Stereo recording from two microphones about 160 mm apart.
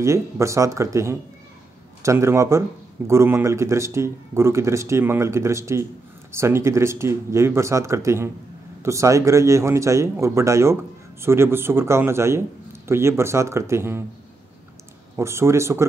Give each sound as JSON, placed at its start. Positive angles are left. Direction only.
{"t": 0.0, "sound": "speech", "side_deg": -20}
{"t": 15.1, "sound": "speech", "side_deg": -15}